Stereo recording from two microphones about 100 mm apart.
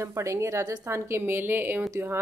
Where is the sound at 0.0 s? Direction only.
30° right (ahead or behind).